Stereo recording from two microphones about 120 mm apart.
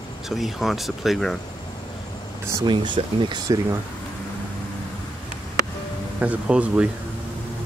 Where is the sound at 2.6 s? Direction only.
40° right (ahead or behind).